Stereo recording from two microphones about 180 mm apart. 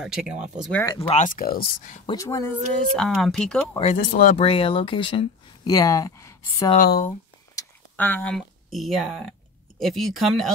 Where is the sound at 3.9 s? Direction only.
50° left (ahead or behind).